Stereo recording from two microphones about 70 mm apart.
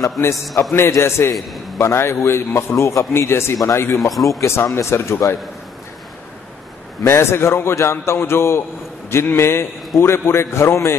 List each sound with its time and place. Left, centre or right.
0.7 s a man's voice: left
4.1 s a man's voice: centre
4.4 s a man's voice: left
7.1 s a man's voice: left